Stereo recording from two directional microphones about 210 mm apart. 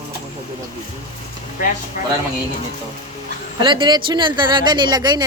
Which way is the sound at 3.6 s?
20° right (ahead or behind).